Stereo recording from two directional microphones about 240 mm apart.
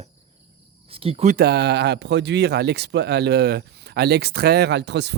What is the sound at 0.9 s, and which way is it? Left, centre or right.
Speech, right.